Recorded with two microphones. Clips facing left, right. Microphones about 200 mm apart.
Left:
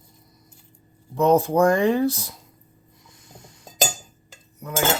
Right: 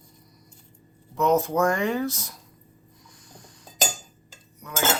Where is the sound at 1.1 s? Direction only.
30° left (ahead or behind).